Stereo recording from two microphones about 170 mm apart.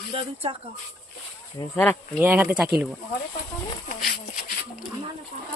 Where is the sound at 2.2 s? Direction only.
10° right (ahead or behind).